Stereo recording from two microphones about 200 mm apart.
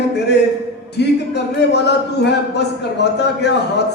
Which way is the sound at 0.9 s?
60° left (ahead or behind).